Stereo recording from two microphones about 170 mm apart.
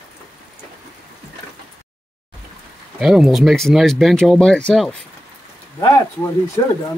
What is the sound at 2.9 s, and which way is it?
Speech, 5° right (ahead or behind).